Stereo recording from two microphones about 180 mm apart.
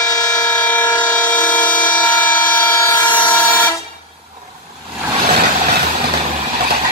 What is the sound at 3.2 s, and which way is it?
Vehicle, 10° left (ahead or behind).